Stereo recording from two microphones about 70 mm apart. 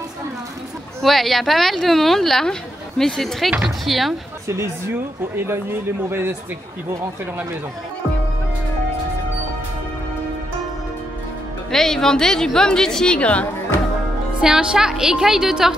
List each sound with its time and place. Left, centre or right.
1.0 s a woman's voice: centre
6.0 s speech: right
11.7 s a woman's voice: centre
14.4 s a woman's voice: centre